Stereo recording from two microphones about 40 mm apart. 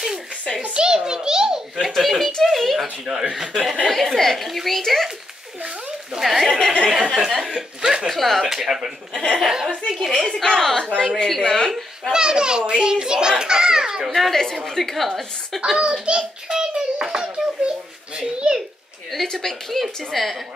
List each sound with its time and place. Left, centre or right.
0.7 s a sound: centre
2.0 s speech: centre
6.1 s speech: centre
6.9 s speech: centre
7.8 s chuckle: centre
8.1 s speech: centre
8.5 s speech: centre
10.4 s speech: centre
11.7 s a child's voice: centre
14.1 s speech: centre
15.9 s a sound: centre
17.6 s babbling: right
18.2 s a sound: centre
19.3 s speech: centre